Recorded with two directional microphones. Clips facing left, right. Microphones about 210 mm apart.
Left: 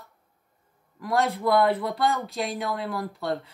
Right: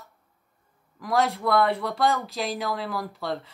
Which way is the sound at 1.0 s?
Centre (ahead or behind).